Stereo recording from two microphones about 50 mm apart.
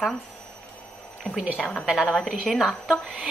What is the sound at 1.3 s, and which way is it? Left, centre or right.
Speech, left.